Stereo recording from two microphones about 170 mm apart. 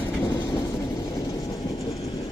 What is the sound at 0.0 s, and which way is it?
Train, 25° left (ahead or behind).